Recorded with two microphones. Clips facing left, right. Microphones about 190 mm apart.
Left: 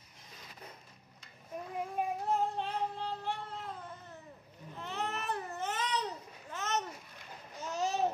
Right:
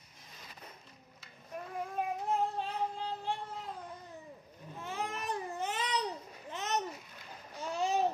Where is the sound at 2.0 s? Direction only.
15° left (ahead or behind).